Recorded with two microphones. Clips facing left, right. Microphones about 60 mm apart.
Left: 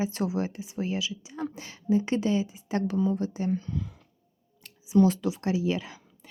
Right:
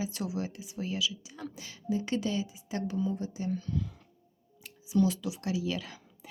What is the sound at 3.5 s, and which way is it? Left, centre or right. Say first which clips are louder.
Speech: left 3 dB; left.